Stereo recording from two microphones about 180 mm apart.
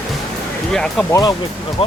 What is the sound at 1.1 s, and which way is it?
Speech, 20° left (ahead or behind).